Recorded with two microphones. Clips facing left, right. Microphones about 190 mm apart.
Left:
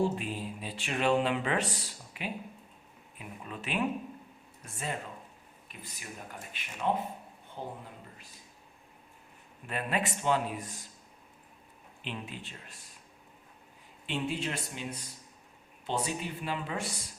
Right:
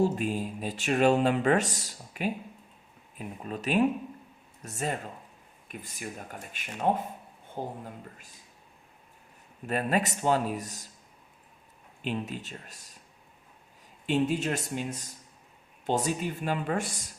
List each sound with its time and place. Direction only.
0.0 s speech: 45° right (ahead or behind)
9.6 s speech: 40° right (ahead or behind)
12.0 s speech: 45° right (ahead or behind)
14.1 s speech: 45° right (ahead or behind)